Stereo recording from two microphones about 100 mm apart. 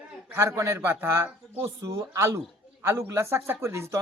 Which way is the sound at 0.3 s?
30° right (ahead or behind).